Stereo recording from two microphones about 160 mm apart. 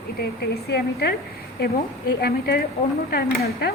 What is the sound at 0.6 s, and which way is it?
Speech, 90° left.